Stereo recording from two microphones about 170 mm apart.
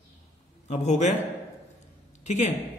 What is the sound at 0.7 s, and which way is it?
Speech, 40° left (ahead or behind).